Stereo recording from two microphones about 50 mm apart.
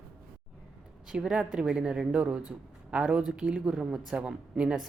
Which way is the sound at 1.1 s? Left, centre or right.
Centre.